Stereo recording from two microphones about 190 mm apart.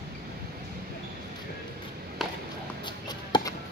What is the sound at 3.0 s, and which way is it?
Chop, 20° left (ahead or behind).